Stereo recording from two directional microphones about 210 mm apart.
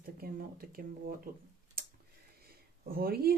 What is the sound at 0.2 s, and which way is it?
A woman's voice, 45° right (ahead or behind).